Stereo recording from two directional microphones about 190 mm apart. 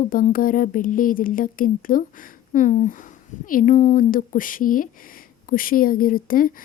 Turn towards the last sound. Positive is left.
turn(degrees=45)  # may be behind; listen again after turning